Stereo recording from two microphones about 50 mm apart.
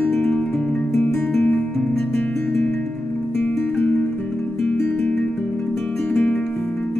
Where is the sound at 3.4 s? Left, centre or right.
Left.